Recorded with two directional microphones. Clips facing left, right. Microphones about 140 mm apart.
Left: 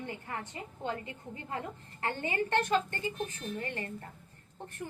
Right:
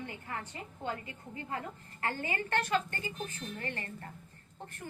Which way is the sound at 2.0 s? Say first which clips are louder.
Left 3 dB; 25° left (ahead or behind).